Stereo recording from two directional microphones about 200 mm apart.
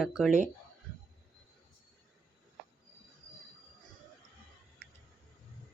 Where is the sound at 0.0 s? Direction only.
Centre (ahead or behind).